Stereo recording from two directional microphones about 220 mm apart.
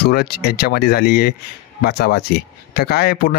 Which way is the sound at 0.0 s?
45° left (ahead or behind).